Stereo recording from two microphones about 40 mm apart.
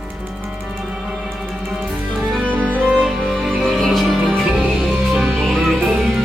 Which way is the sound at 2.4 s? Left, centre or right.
Right.